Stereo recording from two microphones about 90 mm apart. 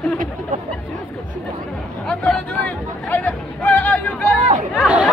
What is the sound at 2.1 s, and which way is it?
Hubbub, 10° left (ahead or behind).